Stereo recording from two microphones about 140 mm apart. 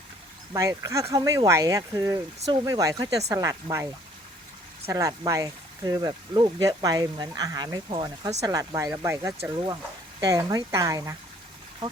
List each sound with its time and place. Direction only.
0.5 s speech: 25° right (ahead or behind)
4.9 s speech: 25° right (ahead or behind)
8.4 s speech: 25° right (ahead or behind)